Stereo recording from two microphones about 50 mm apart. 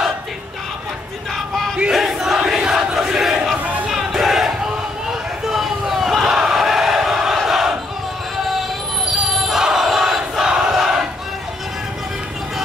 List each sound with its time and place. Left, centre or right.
1.9 s battle cry: centre
5.5 s battle cry: centre
9.5 s battle cry: centre